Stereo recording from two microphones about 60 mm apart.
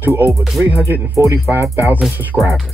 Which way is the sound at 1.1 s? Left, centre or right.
Right.